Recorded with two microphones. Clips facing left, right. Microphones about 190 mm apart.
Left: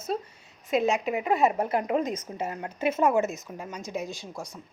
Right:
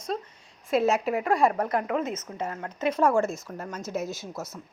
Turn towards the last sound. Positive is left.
turn(degrees=10)  # may be behind; listen again after turning